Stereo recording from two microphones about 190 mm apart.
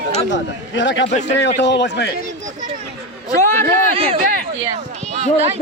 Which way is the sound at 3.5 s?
10° left (ahead or behind).